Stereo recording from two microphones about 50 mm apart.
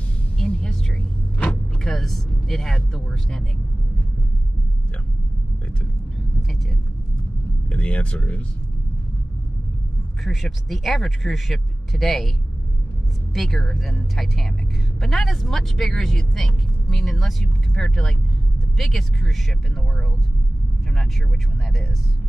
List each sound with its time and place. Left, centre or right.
0.4 s music: centre
1.8 s speech: centre
7.7 s speech: left
10.2 s speech: centre
13.3 s speech: centre